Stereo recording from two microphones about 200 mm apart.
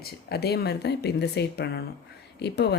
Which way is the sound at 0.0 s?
50° left (ahead or behind).